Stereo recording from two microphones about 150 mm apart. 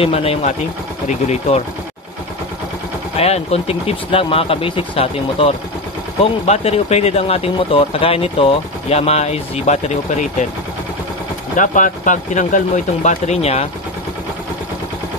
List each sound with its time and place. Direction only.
0.0 s speech: 40° left (ahead or behind)
3.2 s speech: 45° left (ahead or behind)
11.5 s speech: 60° left (ahead or behind); by 13.7 s 45° left (ahead or behind)